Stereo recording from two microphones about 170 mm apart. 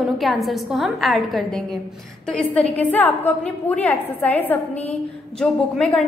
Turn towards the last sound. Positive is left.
turn(degrees=5)  # may be behind; listen again after turning